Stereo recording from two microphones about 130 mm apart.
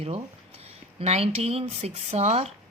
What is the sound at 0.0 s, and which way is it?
A woman's voice, 50° right (ahead or behind).